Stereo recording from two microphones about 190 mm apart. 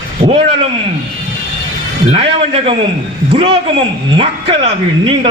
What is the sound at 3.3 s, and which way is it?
A man's voice, 25° right (ahead or behind).